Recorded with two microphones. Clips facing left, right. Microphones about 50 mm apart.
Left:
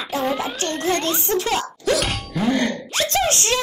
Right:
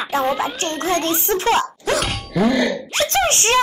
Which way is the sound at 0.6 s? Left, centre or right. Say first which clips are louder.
Right 1 dB; right.